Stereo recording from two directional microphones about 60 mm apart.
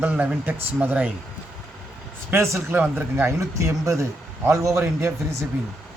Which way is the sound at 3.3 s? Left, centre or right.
Right.